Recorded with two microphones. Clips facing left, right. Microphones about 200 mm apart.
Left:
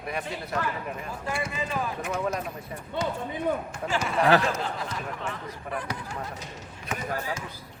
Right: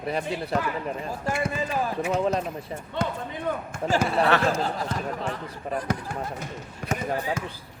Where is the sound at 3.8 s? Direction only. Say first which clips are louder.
Right 2 dB; 40° right (ahead or behind).